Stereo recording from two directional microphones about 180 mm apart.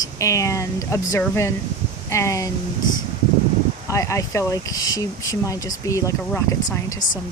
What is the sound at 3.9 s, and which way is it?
Speech, 15° left (ahead or behind).